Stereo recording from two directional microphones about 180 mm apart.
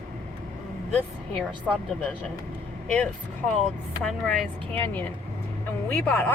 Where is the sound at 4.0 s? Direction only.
5° left (ahead or behind).